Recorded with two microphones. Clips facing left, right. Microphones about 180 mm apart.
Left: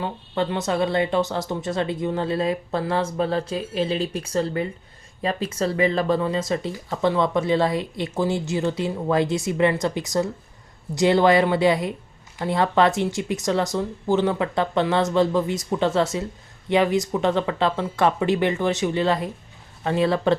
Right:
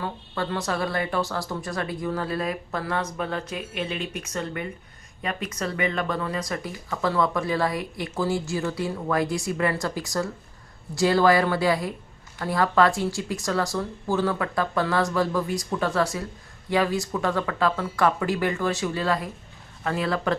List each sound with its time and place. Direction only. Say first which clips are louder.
0.0 s speech: left 5 dB; 20° left (ahead or behind)